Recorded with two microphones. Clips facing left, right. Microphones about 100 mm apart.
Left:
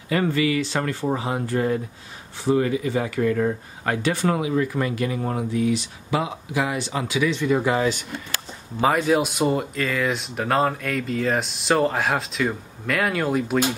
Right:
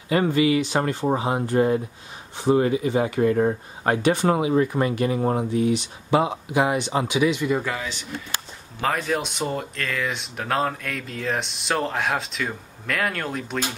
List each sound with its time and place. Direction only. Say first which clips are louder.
0.1 s speech: right 2 dB; 20° right (ahead or behind)
8.8 s speech: left 5 dB; 5° left (ahead or behind)